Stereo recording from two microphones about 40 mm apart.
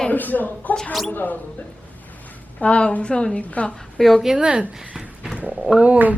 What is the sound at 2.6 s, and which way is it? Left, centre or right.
Speech, left.